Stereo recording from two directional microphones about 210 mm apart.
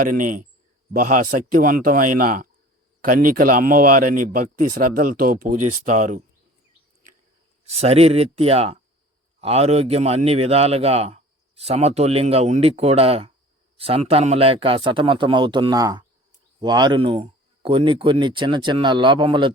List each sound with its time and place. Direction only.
0.0 s speech: 40° right (ahead or behind)
7.6 s a man's voice: 30° right (ahead or behind)